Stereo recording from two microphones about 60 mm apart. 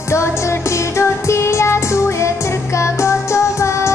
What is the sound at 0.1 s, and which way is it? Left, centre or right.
Music, left.